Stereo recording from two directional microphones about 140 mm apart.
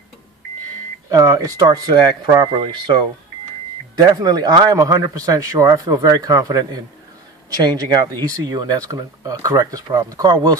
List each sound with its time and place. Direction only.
1.1 s speech: 25° right (ahead or behind)